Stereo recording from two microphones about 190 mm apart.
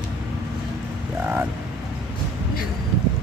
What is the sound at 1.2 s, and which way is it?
Speech, 10° right (ahead or behind).